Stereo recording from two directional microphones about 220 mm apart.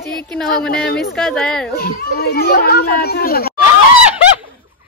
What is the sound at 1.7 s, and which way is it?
Speech, 45° left (ahead or behind).